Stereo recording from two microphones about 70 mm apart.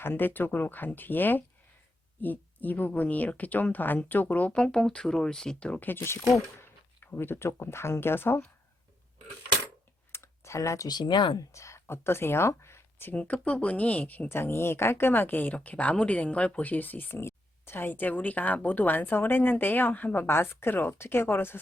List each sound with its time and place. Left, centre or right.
0.0 s speech: left
5.8 s speech: left
10.1 s computer keyboard: left
10.8 s speech: left
11.5 s speech: left
13.1 s speech: centre
14.3 s speech: left